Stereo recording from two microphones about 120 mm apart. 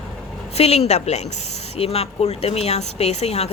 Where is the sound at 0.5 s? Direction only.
60° left (ahead or behind).